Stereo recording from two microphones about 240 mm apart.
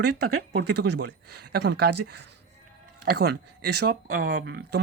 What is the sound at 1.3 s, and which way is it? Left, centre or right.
Speech, right.